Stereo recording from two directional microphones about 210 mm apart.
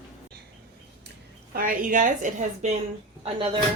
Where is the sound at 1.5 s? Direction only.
40° right (ahead or behind).